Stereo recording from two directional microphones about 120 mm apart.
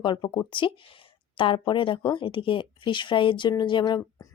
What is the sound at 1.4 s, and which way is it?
Speech, 45° left (ahead or behind).